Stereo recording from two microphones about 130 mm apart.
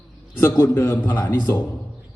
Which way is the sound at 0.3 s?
20° left (ahead or behind).